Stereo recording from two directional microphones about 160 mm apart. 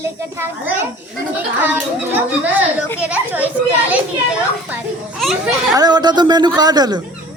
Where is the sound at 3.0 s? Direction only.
10° right (ahead or behind).